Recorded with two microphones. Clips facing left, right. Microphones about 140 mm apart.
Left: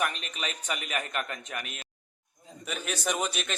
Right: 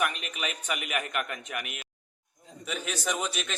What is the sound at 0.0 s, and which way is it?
A man's voice, 10° right (ahead or behind).